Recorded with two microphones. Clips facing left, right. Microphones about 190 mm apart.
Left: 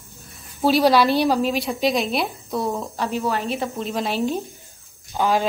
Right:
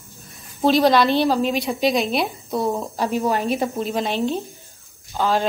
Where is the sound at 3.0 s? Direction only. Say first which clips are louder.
Right 3 dB; 15° right (ahead or behind).